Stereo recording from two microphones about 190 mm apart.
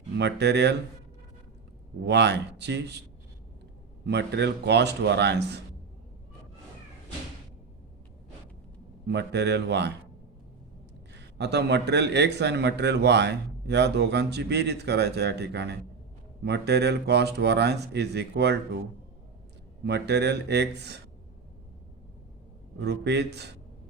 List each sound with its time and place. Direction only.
0.2 s a man's voice: 65° right (ahead or behind)
2.0 s a man's voice: 65° right (ahead or behind)
4.0 s a man's voice: 60° right (ahead or behind)
9.0 s a man's voice: 65° right (ahead or behind)
11.3 s a man's voice: 65° right (ahead or behind)
19.8 s a man's voice: 65° right (ahead or behind)
22.8 s a man's voice: 60° right (ahead or behind)